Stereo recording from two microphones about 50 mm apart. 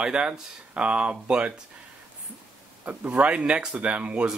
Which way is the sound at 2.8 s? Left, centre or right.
Right.